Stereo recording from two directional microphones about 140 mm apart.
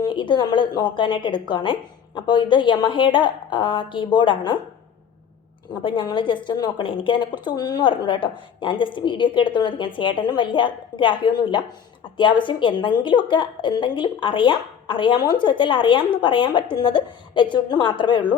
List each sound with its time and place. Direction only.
0.0 s a woman's voice: 35° left (ahead or behind)
5.8 s a woman's voice: 35° left (ahead or behind)